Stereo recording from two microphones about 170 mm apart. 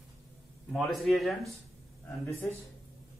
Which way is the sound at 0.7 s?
Centre (ahead or behind).